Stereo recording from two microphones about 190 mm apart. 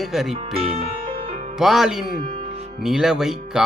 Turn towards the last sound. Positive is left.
turn(degrees=-5)  # may be behind; listen again after turning